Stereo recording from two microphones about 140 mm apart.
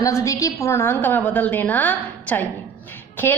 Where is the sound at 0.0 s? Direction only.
25° left (ahead or behind).